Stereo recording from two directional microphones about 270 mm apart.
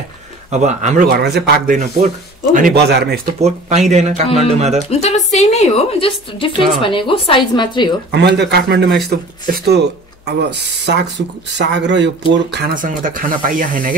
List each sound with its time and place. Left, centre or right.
0.5 s speech: right
3.3 s speech: right
4.9 s a woman's voice: left
8.1 s speech: right